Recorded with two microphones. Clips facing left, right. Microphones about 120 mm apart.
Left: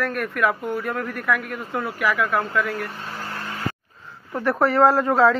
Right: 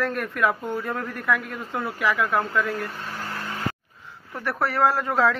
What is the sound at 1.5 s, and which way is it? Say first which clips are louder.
Speech: left 2 dB; 15° left (ahead or behind).